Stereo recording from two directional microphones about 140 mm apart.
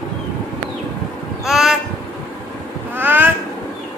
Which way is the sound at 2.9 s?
15° right (ahead or behind).